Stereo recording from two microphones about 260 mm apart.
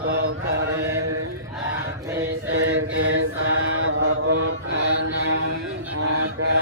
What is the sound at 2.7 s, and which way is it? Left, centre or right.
Mantra, right.